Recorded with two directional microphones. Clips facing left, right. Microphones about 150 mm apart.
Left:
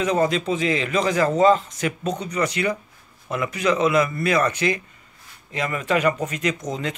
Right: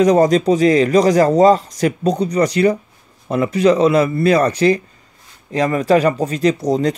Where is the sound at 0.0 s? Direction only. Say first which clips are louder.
Right 9 dB; 40° right (ahead or behind).